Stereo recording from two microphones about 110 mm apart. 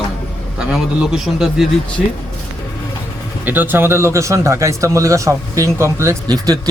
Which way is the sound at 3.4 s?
15° right (ahead or behind).